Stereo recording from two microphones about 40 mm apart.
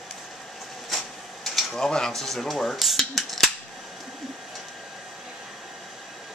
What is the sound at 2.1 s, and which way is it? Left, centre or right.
Cutlery, centre.